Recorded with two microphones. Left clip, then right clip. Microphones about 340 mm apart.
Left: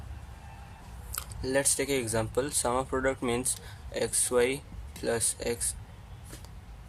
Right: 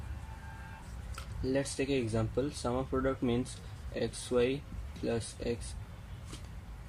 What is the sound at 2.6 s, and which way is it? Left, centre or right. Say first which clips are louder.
Speech: left 7 dB; left.